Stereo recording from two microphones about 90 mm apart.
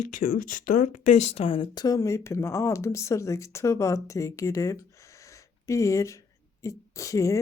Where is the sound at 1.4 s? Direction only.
75° left (ahead or behind).